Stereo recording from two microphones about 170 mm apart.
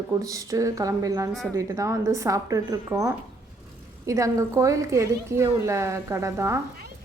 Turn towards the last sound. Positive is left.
turn(degrees=-15)  # may be behind; listen again after turning